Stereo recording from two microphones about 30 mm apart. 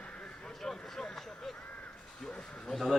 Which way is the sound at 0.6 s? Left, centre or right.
Centre.